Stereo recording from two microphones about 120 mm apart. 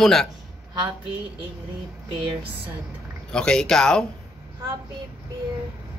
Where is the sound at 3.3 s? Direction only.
5° left (ahead or behind).